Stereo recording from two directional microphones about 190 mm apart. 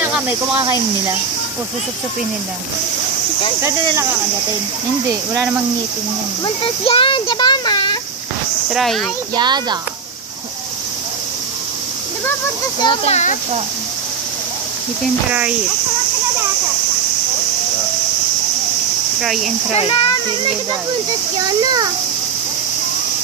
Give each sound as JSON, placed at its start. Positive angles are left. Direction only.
{"t": 0.0, "sound": "speech", "side_deg": -5}
{"t": 0.6, "sound": "cricket", "side_deg": -15}
{"t": 3.6, "sound": "cricket", "side_deg": -15}
{"t": 6.4, "sound": "speech", "side_deg": 30}
{"t": 8.6, "sound": "speech", "side_deg": 0}
{"t": 9.3, "sound": "a child's voice", "side_deg": -20}
{"t": 12.8, "sound": "speech", "side_deg": 35}
{"t": 19.2, "sound": "speech", "side_deg": 0}
{"t": 19.7, "sound": "speech", "side_deg": 30}
{"t": 21.4, "sound": "a child's voice", "side_deg": -20}